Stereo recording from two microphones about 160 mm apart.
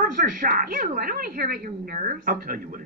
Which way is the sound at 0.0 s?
55° right (ahead or behind).